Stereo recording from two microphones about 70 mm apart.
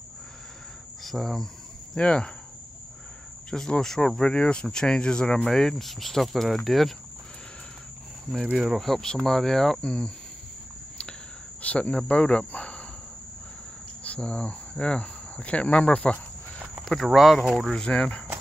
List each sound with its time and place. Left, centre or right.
1.0 s cricket: centre
2.0 s speech: centre
3.4 s speech: centre
8.5 s speech: centre
11.6 s speech: centre
14.0 s speech: centre
16.8 s speech: centre